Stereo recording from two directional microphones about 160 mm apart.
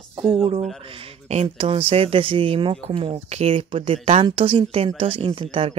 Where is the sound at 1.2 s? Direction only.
40° right (ahead or behind).